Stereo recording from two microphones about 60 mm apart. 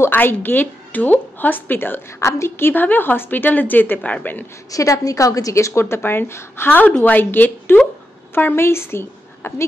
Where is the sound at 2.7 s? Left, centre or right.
Left.